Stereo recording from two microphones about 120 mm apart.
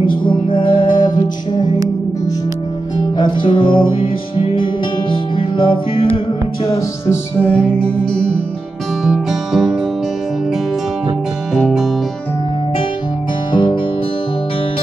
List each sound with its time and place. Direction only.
0.0 s music: 45° left (ahead or behind)
3.2 s music: 40° left (ahead or behind)
7.1 s music: 10° left (ahead or behind)
9.0 s music: 5° right (ahead or behind)
11.5 s music: 5° right (ahead or behind)
13.5 s music: 45° left (ahead or behind)